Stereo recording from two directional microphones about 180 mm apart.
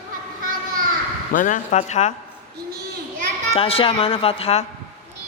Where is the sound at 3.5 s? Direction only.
30° left (ahead or behind).